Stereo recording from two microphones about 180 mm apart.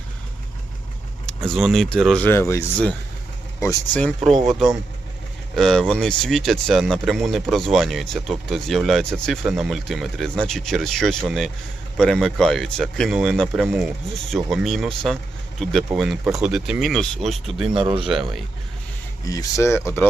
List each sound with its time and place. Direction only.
1.3 s speech: centre (ahead or behind)
3.9 s speech: 5° left (ahead or behind)
5.5 s speech: centre (ahead or behind)
17.7 s speech: 25° right (ahead or behind)
19.2 s speech: 20° left (ahead or behind)